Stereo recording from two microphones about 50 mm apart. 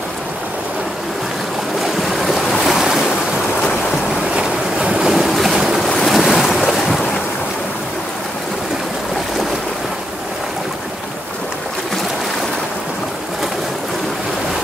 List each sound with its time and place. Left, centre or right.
1.8 s waves: centre
4.2 s boat: centre
5.0 s waves: centre